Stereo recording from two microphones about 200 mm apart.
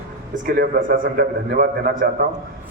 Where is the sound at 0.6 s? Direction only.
50° right (ahead or behind).